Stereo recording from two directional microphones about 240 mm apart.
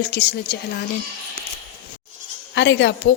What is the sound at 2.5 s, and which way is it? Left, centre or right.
Speech, left.